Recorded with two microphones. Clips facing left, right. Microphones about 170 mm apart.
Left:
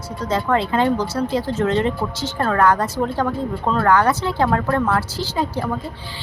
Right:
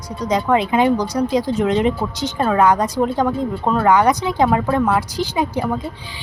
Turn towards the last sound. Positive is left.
turn(degrees=-15)  # may be behind; listen again after turning